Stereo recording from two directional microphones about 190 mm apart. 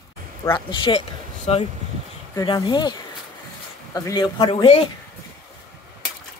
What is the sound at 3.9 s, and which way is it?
Speech, 20° left (ahead or behind).